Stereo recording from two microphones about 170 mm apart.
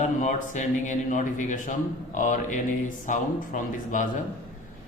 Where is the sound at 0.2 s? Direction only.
45° left (ahead or behind).